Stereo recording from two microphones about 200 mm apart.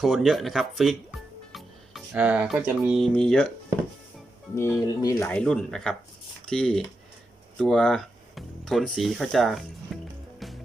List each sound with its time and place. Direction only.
0.0 s speech: centre (ahead or behind)
4.5 s speech: 10° left (ahead or behind)
10.4 s music: centre (ahead or behind)